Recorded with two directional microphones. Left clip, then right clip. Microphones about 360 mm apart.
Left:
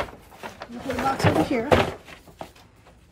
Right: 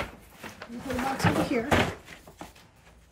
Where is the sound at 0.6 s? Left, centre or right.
Centre.